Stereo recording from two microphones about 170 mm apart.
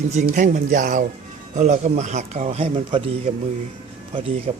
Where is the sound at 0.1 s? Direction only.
40° right (ahead or behind).